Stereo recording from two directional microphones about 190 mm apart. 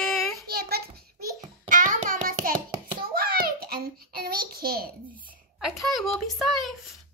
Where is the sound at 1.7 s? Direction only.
45° right (ahead or behind).